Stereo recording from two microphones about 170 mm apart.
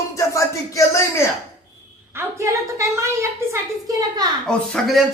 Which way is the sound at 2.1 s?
15° right (ahead or behind).